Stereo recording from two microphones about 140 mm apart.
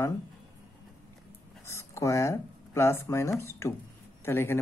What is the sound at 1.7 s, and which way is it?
Speech, 20° left (ahead or behind).